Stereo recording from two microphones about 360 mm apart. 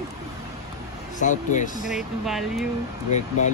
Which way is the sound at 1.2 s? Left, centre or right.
Left.